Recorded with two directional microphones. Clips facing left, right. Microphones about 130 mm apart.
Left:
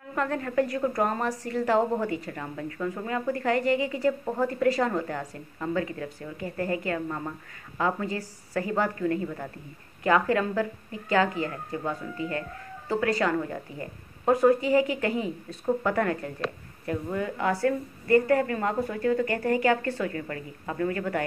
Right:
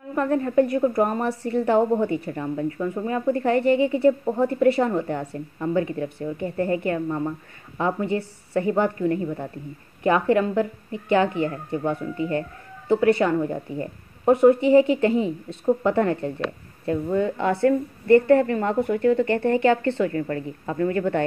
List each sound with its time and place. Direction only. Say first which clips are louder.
0.1 s speech: right 6 dB; 25° right (ahead or behind)